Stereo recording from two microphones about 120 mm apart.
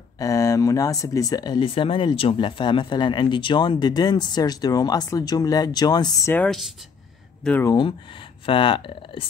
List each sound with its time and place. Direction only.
0.2 s speech: 25° left (ahead or behind)
1.7 s speech: 45° left (ahead or behind)
6.4 s speech: centre (ahead or behind)
7.6 s speech: 40° left (ahead or behind)